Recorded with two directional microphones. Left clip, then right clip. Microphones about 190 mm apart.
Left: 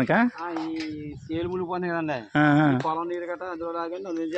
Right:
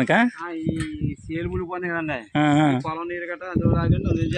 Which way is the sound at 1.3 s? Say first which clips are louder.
Left 1 dB; 25° right (ahead or behind).